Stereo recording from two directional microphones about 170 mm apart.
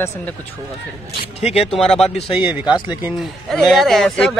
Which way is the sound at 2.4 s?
10° right (ahead or behind).